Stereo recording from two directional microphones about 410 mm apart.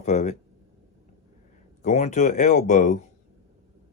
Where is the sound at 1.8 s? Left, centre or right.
Centre.